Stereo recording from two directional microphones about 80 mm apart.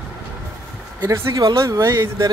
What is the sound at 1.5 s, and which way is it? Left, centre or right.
Speech, right.